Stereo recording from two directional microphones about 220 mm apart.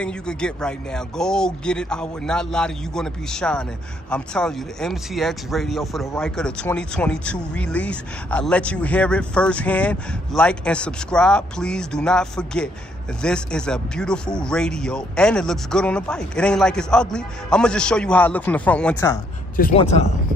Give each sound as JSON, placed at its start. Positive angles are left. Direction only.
{"t": 0.0, "sound": "speech", "side_deg": 5}
{"t": 19.7, "sound": "speech", "side_deg": 30}